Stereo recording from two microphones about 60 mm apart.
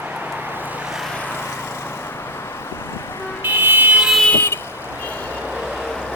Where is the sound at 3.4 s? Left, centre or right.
Right.